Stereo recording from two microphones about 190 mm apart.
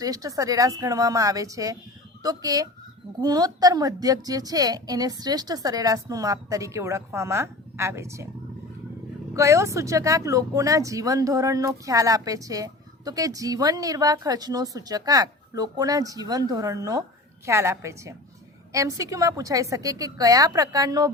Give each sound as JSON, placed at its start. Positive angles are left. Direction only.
{"t": 0.0, "sound": "a woman's voice", "side_deg": -20}
{"t": 9.3, "sound": "a woman's voice", "side_deg": -15}